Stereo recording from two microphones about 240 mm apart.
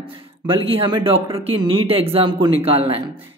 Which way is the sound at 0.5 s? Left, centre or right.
Right.